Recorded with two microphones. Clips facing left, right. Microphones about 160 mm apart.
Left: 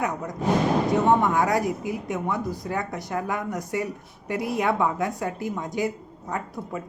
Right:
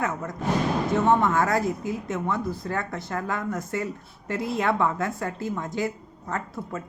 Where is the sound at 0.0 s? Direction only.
15° left (ahead or behind).